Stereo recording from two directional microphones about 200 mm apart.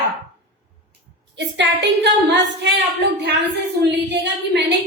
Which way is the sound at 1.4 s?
60° right (ahead or behind).